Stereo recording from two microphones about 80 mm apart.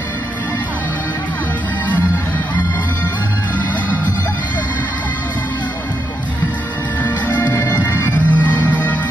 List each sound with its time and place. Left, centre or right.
7.0 s music: left
7.7 s bagpipes: left